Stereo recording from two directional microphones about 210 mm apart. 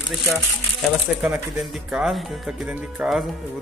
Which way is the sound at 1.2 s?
Centre (ahead or behind).